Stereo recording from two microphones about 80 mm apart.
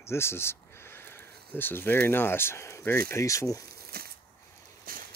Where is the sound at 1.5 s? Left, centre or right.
Left.